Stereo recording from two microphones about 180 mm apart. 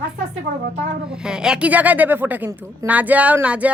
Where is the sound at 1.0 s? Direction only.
5° right (ahead or behind).